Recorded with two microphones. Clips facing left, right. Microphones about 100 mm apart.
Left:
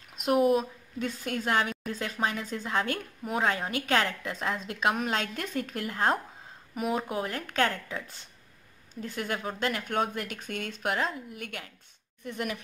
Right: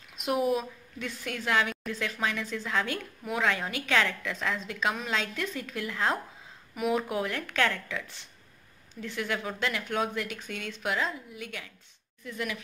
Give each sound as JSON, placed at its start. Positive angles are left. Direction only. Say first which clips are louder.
{"t": 0.9, "sound": "speech", "louder": "left 4 dB", "side_deg": 45}